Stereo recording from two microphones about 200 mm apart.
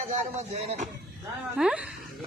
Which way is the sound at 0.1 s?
35° right (ahead or behind).